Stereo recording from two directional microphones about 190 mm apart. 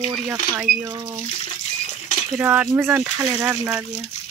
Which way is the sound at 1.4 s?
35° left (ahead or behind).